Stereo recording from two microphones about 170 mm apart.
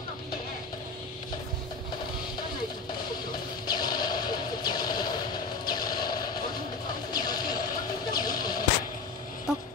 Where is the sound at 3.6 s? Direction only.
25° left (ahead or behind).